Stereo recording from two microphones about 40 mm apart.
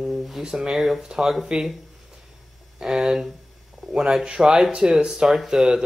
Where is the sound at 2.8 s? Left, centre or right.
Centre.